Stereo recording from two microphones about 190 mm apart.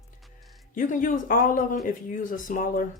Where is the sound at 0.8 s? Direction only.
45° left (ahead or behind).